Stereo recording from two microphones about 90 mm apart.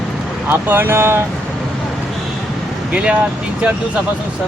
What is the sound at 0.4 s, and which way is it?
Speech, 25° right (ahead or behind).